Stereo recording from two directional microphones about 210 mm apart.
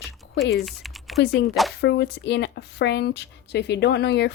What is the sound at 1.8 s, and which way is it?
A woman's voice, 55° left (ahead or behind).